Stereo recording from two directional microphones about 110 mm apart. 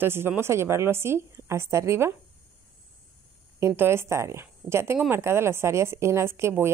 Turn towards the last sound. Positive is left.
turn(degrees=-25)  # may be behind; listen again after turning